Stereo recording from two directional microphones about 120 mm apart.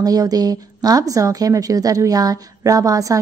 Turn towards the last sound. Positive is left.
turn(degrees=-30)  # may be behind; listen again after turning